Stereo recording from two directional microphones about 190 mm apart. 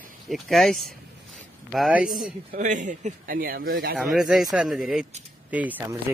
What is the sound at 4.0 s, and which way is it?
Speech, centre (ahead or behind).